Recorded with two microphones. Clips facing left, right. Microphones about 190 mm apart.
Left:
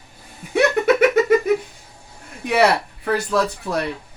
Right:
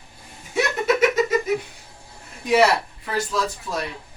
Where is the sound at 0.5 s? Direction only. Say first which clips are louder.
Left 5 dB; 60° left (ahead or behind).